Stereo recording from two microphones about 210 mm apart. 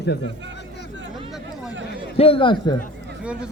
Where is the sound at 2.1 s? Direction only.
25° left (ahead or behind).